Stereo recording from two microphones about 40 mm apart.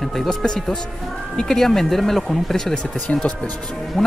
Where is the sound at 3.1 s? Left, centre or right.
Left.